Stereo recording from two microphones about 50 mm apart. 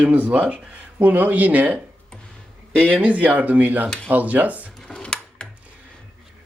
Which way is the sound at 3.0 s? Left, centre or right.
Right.